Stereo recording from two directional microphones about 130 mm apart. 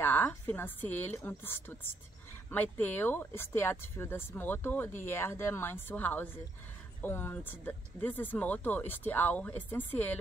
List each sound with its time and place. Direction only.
0.0 s a woman's voice: 15° left (ahead or behind)